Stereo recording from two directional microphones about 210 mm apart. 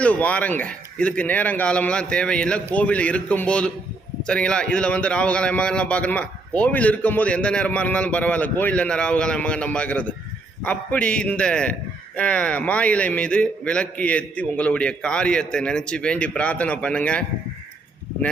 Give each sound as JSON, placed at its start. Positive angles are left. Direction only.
{"t": 0.0, "sound": "a man's voice", "side_deg": 5}